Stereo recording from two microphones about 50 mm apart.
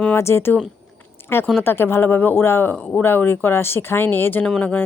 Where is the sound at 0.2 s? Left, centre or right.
Left.